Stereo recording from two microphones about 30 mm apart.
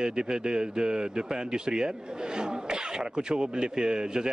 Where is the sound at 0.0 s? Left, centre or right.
Right.